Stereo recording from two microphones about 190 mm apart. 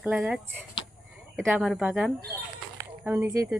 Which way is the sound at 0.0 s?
5° right (ahead or behind).